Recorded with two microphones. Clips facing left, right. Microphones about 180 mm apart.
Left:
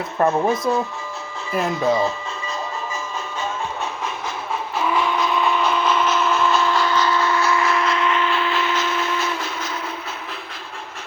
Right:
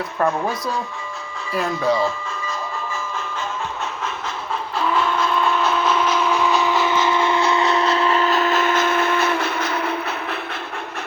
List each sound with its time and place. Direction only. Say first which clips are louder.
0.2 s speech: left 3 dB; 25° left (ahead or behind)
4.8 s train: even; 10° left (ahead or behind)
6.1 s steam whistle: even; 10° right (ahead or behind)
7.2 s train: right 1 dB; 20° right (ahead or behind); by 10.3 s 65° right (ahead or behind)